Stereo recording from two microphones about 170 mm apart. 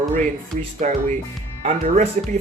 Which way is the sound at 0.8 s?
45° right (ahead or behind).